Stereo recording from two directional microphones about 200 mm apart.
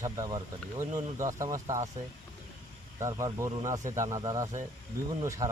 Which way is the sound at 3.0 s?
15° right (ahead or behind).